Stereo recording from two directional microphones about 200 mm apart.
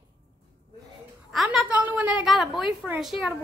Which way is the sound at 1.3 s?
Centre (ahead or behind).